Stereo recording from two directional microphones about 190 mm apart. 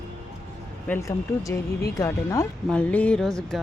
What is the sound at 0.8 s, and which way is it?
Speech, 15° left (ahead or behind).